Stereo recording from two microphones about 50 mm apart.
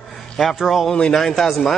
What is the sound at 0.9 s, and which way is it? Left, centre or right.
Speech, centre.